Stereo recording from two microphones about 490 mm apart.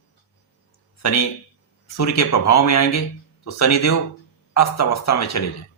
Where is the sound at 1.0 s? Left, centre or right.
Left.